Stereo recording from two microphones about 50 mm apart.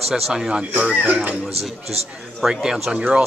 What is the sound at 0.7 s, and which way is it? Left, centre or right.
Speech, right.